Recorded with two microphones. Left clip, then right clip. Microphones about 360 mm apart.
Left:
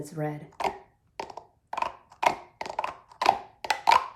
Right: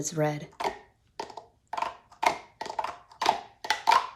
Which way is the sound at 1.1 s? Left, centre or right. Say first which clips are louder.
Left 1 dB; centre.